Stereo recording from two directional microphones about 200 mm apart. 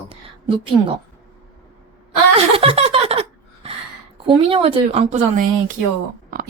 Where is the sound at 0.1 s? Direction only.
25° right (ahead or behind).